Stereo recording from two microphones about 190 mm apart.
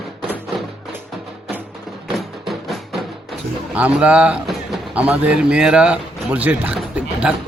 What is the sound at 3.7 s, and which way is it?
Speech, 5° right (ahead or behind).